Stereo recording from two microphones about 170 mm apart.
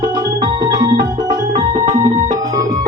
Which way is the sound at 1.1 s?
50° right (ahead or behind).